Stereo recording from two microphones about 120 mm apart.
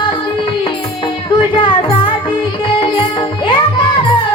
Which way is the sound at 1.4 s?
45° left (ahead or behind).